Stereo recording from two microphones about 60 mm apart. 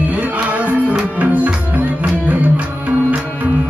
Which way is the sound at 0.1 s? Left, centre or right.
Right.